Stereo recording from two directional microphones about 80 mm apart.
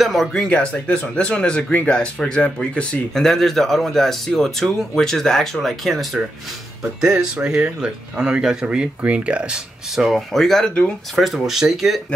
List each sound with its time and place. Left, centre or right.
0.0 s speech: centre
3.3 s speech: centre
6.8 s speech: centre
10.0 s speech: centre